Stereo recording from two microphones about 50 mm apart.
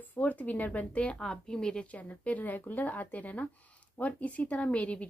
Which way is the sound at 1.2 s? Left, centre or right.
Centre.